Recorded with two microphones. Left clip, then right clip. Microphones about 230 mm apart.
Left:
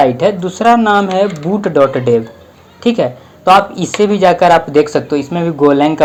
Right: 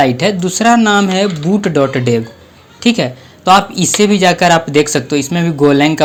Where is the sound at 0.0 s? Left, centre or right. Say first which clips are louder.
Left 1 dB; right.